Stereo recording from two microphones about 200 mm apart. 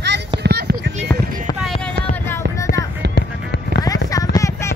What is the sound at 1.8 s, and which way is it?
Music, 10° left (ahead or behind).